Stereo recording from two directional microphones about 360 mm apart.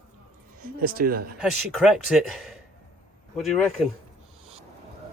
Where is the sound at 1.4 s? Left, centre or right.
Centre.